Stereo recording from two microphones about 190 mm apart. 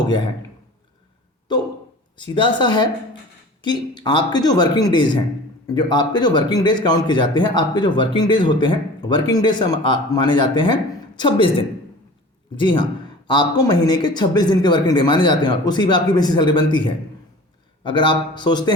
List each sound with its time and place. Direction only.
2.1 s a man's voice: 25° left (ahead or behind)